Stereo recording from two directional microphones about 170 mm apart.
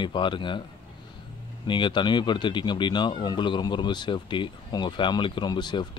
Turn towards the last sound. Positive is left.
turn(degrees=25)  # may be behind; listen again after turning